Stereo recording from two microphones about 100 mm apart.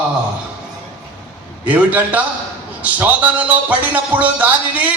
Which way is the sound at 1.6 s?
15° right (ahead or behind).